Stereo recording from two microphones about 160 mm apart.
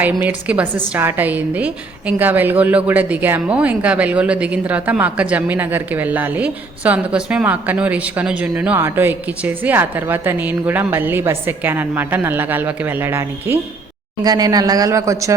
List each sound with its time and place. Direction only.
0.1 s a woman's voice: 10° right (ahead or behind)
14.3 s speech: 25° right (ahead or behind)